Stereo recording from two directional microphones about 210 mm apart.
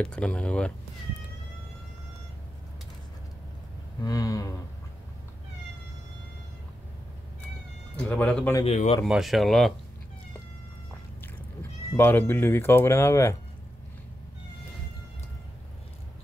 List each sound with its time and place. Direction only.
0.0 s speech: 5° left (ahead or behind)
4.0 s speech: 15° left (ahead or behind)
8.0 s speech: 5° left (ahead or behind)
8.6 s speech: 30° left (ahead or behind)
9.0 s speech: centre (ahead or behind)
12.0 s speech: 10° left (ahead or behind)